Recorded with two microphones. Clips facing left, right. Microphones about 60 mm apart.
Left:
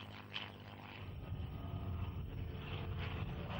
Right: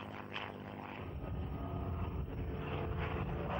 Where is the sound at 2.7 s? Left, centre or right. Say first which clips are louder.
Right 7 dB; centre.